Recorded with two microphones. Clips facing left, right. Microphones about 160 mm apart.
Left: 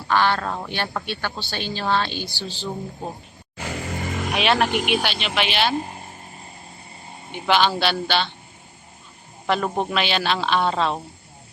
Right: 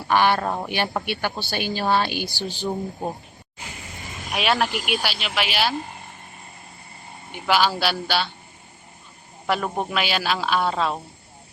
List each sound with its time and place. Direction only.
0.1 s speech: 15° right (ahead or behind)
3.6 s music: 75° left (ahead or behind)
4.3 s a man's voice: centre (ahead or behind)
7.3 s speech: 5° right (ahead or behind)
9.5 s a man's voice: 5° right (ahead or behind)